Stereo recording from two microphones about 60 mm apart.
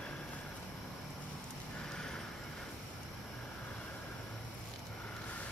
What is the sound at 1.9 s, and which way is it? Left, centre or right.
Vehicle, centre.